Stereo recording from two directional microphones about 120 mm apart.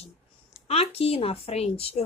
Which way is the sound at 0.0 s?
55° left (ahead or behind).